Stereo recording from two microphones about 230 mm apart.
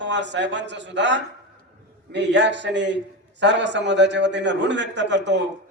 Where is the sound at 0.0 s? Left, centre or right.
Right.